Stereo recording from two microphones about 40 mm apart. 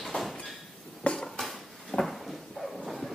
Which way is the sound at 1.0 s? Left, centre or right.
Left.